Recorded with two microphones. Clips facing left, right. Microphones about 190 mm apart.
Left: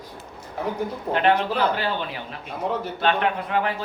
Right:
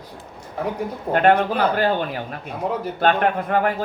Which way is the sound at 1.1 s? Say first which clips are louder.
Right 4 dB; 50° right (ahead or behind).